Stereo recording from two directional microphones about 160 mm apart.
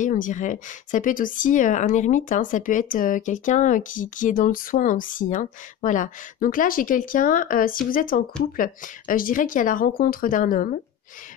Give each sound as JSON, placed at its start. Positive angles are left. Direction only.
{"t": 0.0, "sound": "speech", "side_deg": 55}